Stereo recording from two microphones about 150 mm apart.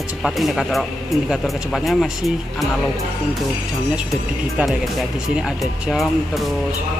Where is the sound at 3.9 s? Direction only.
5° right (ahead or behind).